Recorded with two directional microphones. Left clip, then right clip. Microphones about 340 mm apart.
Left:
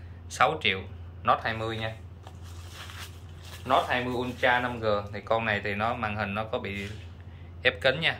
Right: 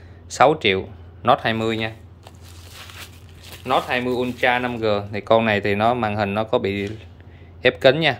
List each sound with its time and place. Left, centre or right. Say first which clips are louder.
0.3 s speech: right 9 dB; centre
3.4 s speech: right 4 dB; right